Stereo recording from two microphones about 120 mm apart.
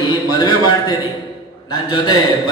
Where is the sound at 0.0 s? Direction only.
35° left (ahead or behind).